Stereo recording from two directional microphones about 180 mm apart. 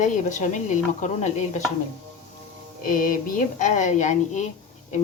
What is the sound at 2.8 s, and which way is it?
A woman's voice, 50° left (ahead or behind).